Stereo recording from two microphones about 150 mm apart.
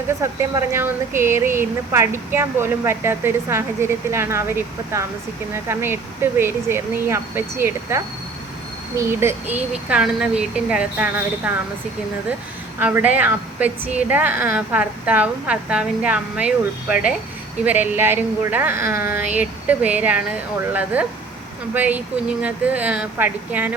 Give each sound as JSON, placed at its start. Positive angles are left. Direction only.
{"t": 0.2, "sound": "speech", "side_deg": -20}
{"t": 12.8, "sound": "speech", "side_deg": -10}